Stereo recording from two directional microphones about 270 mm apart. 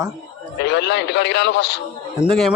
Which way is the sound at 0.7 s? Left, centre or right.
Left.